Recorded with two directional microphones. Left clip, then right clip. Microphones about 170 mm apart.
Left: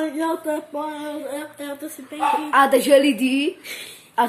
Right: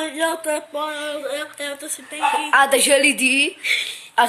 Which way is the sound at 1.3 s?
15° left (ahead or behind).